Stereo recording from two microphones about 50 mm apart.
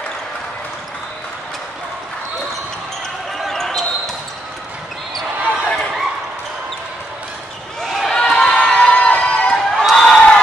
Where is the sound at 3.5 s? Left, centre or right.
Centre.